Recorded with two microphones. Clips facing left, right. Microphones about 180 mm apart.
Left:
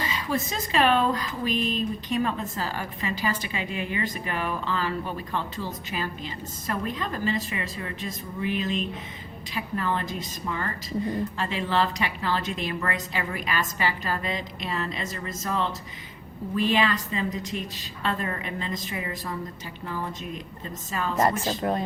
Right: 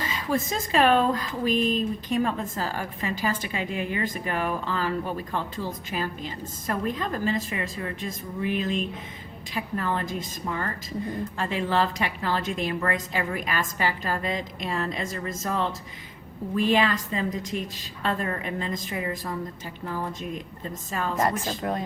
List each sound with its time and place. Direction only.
0.1 s speech: 45° right (ahead or behind)
21.2 s a woman's voice: 30° left (ahead or behind)